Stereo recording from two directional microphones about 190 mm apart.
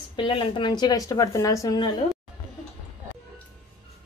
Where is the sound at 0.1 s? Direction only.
25° left (ahead or behind).